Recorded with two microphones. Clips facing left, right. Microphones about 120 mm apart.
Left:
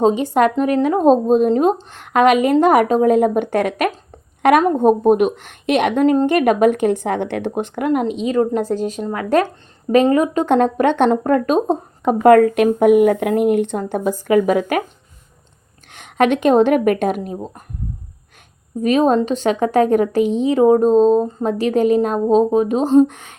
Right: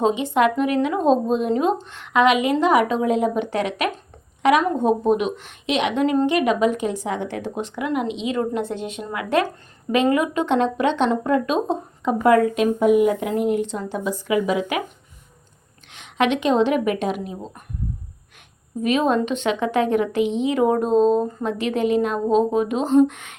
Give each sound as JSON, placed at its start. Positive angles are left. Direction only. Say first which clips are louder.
{"t": 0.0, "sound": "a woman's voice", "louder": "left 4 dB", "side_deg": 40}
{"t": 15.9, "sound": "speech", "louder": "left 5 dB", "side_deg": 50}
{"t": 18.8, "sound": "a woman's voice", "louder": "left 5 dB", "side_deg": 40}